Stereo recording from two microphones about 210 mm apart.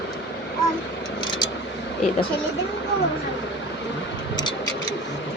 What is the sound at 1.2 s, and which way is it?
Vehicle, 20° left (ahead or behind).